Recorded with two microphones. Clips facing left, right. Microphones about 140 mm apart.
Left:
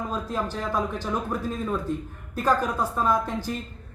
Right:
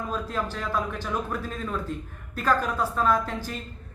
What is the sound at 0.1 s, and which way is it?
Speech, 15° left (ahead or behind).